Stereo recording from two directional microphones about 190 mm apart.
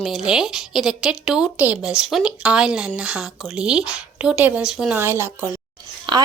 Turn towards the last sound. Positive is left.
turn(degrees=-25)  # may be behind; listen again after turning